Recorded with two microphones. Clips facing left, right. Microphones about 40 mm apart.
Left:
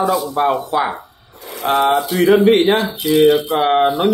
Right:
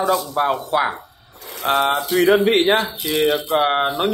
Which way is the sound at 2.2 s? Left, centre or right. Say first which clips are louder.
Left 4 dB; right.